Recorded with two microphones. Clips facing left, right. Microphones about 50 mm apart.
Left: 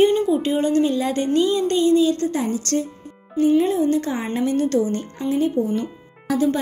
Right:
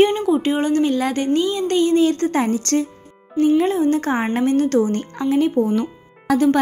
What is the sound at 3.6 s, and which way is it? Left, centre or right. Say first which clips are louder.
A woman's voice: right 1 dB; right.